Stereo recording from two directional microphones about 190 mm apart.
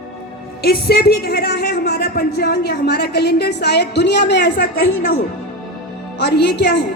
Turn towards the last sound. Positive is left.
turn(degrees=60)  # may be behind; listen again after turning